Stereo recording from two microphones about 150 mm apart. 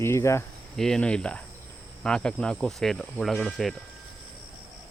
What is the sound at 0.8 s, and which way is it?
Speech, 5° left (ahead or behind).